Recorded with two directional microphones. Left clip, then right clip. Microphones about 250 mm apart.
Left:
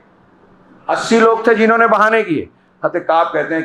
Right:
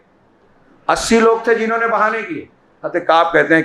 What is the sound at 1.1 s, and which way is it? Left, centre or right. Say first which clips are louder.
Speech: left 2 dB; centre.